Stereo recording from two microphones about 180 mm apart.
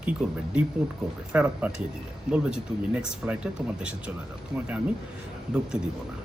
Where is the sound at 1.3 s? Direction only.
5° right (ahead or behind).